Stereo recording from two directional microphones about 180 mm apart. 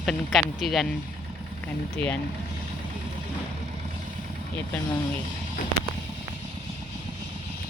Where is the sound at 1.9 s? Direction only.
10° left (ahead or behind).